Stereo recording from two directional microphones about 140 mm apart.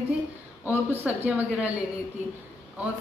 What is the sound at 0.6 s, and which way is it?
A woman's voice, 15° right (ahead or behind).